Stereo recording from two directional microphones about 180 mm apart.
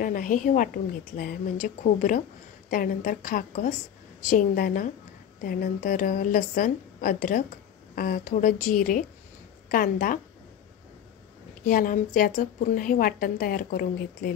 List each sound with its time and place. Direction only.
0.0 s a woman's voice: 50° left (ahead or behind)
11.6 s a woman's voice: 50° left (ahead or behind)